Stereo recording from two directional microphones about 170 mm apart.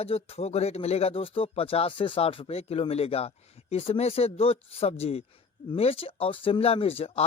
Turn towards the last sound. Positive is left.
turn(degrees=35)  # may be behind; listen again after turning